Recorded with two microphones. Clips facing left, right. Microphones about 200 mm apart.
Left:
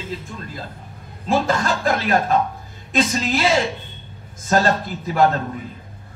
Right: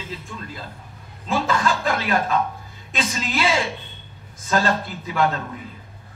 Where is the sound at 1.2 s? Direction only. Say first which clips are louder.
Left 2 dB; 40° left (ahead or behind).